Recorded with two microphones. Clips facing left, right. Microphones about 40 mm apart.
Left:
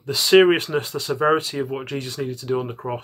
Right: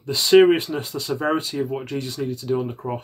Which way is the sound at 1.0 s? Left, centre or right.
Centre.